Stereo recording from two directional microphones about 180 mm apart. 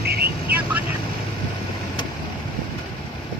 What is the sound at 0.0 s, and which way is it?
Vehicle, 60° right (ahead or behind).